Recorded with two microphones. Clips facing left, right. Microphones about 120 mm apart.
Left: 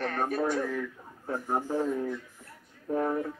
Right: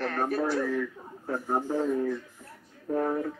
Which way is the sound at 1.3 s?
Centre (ahead or behind).